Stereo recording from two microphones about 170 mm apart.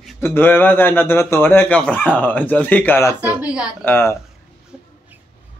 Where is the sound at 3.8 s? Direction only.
15° left (ahead or behind).